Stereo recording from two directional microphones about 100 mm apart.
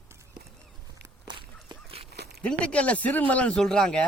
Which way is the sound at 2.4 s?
10° left (ahead or behind).